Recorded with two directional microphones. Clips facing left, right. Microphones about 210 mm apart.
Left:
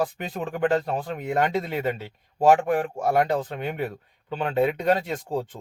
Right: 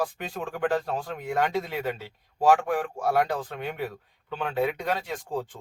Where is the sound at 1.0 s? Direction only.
20° left (ahead or behind).